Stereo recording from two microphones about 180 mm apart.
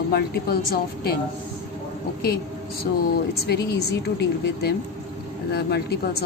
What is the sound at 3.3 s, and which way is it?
Speech, 65° left (ahead or behind).